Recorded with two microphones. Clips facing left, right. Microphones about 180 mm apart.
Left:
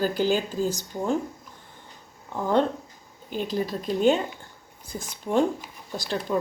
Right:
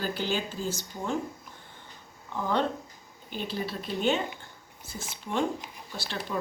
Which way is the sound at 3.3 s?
40° left (ahead or behind).